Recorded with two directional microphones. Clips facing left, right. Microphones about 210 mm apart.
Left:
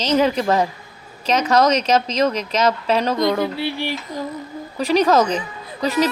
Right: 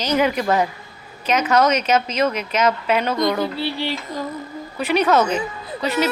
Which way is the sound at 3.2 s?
25° left (ahead or behind).